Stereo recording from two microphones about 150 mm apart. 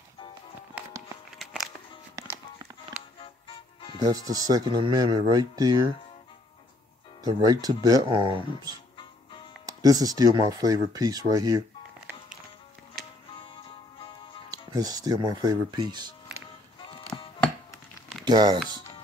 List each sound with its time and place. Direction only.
1.4 s music: centre (ahead or behind)
2.1 s music: 20° right (ahead or behind)
3.2 s music: 35° left (ahead or behind)
4.0 s speech: 25° right (ahead or behind)
7.2 s speech: 25° right (ahead or behind)
8.9 s music: 35° left (ahead or behind)
9.7 s speech: 25° right (ahead or behind)
13.4 s music: 35° left (ahead or behind)
14.5 s speech: 25° right (ahead or behind)
17.1 s music: 15° left (ahead or behind)
18.2 s speech: 30° right (ahead or behind)